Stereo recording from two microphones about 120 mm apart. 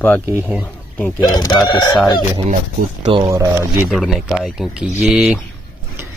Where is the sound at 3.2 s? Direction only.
25° right (ahead or behind).